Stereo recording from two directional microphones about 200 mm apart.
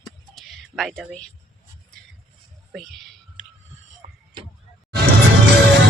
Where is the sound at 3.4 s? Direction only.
40° right (ahead or behind).